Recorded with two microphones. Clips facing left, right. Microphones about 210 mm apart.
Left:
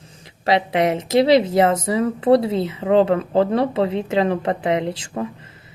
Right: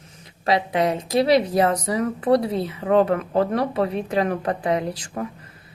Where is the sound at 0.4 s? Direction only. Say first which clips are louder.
Left 2 dB; 25° left (ahead or behind).